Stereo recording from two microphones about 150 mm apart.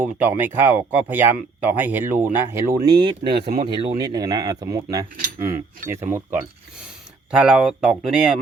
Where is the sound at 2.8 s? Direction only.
35° right (ahead or behind).